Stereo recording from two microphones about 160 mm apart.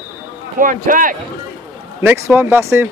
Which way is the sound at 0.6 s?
55° right (ahead or behind).